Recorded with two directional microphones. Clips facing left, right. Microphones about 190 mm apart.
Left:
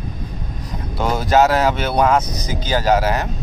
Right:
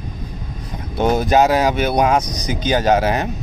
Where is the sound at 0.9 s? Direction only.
20° right (ahead or behind).